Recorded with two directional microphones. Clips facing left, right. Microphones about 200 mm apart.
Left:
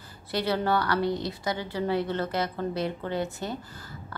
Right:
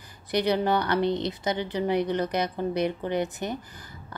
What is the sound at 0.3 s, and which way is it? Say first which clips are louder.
A woman's voice: right 3 dB; 20° right (ahead or behind).